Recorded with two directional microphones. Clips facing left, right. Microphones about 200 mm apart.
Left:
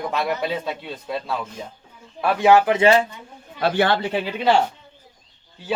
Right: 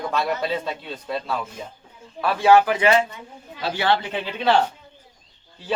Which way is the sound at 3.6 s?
55° left (ahead or behind).